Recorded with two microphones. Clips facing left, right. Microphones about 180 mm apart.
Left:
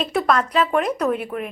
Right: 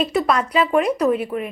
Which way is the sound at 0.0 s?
5° right (ahead or behind).